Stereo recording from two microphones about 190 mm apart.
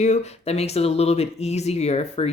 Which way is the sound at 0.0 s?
35° left (ahead or behind).